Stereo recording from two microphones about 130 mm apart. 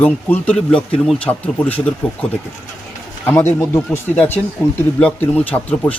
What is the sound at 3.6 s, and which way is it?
Speech, 20° left (ahead or behind).